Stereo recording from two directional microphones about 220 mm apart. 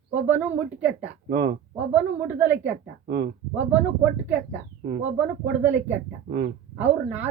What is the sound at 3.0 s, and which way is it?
Speech, 45° right (ahead or behind).